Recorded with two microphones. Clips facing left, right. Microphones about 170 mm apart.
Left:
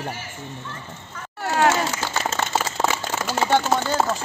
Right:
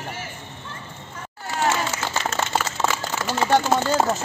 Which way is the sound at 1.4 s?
70° left (ahead or behind).